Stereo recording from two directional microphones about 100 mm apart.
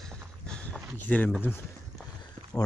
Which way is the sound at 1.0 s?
15° left (ahead or behind).